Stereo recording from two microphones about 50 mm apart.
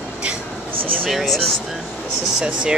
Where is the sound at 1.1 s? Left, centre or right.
Centre.